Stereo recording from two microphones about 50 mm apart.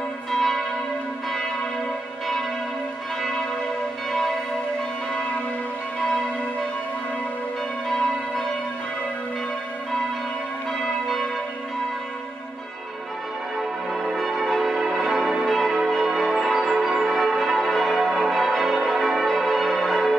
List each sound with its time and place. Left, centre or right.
0.3 s church bell: centre
14.1 s change ringing: centre